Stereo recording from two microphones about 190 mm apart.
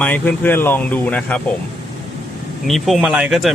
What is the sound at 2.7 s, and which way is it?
Speech, 5° right (ahead or behind).